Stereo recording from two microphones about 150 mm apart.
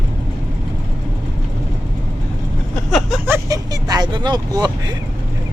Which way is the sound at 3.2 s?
15° right (ahead or behind).